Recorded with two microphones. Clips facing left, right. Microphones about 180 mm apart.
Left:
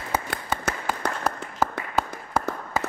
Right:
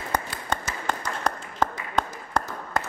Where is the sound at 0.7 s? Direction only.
60° left (ahead or behind).